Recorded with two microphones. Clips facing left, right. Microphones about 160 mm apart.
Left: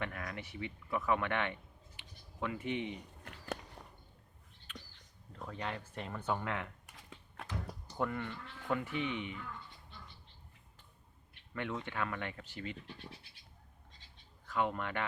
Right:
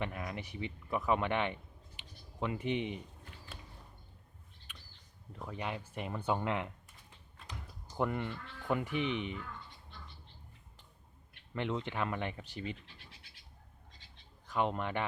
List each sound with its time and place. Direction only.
0.0 s speech: 20° right (ahead or behind)
2.0 s a sound: 20° right (ahead or behind)
3.2 s biting: 70° left (ahead or behind)
5.3 s speech: 15° right (ahead or behind)
6.8 s typing: 75° left (ahead or behind)
7.9 s speech: 20° right (ahead or behind)
11.5 s speech: 25° right (ahead or behind)
14.4 s speech: 20° right (ahead or behind)